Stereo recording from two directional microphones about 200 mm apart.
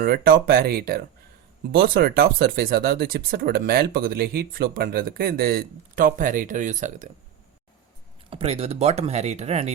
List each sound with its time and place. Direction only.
0.0 s speech: 50° right (ahead or behind)
8.3 s speech: 30° right (ahead or behind)